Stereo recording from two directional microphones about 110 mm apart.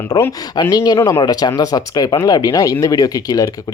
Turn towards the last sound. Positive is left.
turn(degrees=35)  # may be behind; listen again after turning